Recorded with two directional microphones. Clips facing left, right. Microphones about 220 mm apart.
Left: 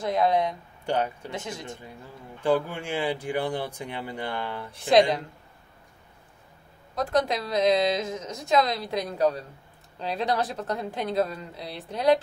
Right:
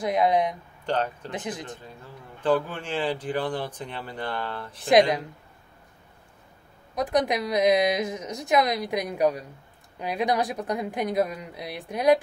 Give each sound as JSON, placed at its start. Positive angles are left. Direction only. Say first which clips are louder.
{"t": 0.0, "sound": "a woman's voice", "louder": "right 1 dB", "side_deg": -15}
{"t": 0.8, "sound": "speech", "louder": "even", "side_deg": 10}
{"t": 1.3, "sound": "a woman's voice", "louder": "right 2 dB", "side_deg": -15}
{"t": 2.4, "sound": "speech", "louder": "even", "side_deg": 10}
{"t": 7.0, "sound": "a woman's voice", "louder": "right 1 dB", "side_deg": -15}